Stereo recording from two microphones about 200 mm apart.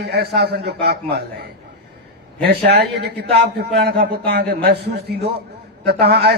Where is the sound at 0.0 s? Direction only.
55° right (ahead or behind).